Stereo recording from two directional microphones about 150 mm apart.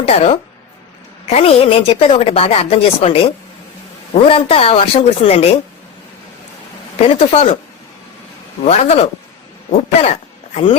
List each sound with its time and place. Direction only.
0.0 s a woman's voice: 40° left (ahead or behind)
7.1 s speech: 40° left (ahead or behind)
8.6 s speech: 50° left (ahead or behind)